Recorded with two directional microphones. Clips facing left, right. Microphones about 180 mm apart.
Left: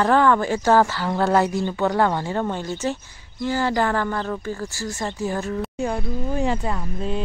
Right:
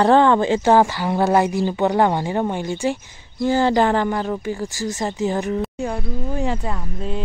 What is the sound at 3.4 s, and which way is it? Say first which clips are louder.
Speech: right 5 dB; 25° right (ahead or behind).